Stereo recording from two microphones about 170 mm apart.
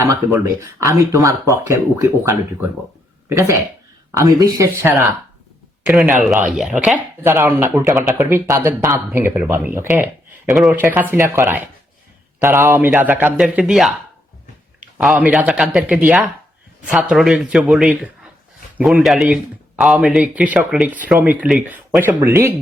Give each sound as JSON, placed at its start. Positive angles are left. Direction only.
{"t": 0.0, "sound": "speech", "side_deg": -15}
{"t": 5.8, "sound": "speech", "side_deg": -5}
{"t": 14.9, "sound": "speech", "side_deg": -5}